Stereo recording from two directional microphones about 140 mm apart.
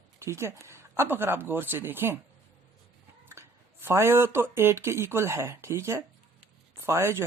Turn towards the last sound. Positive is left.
turn(degrees=-20)  # may be behind; listen again after turning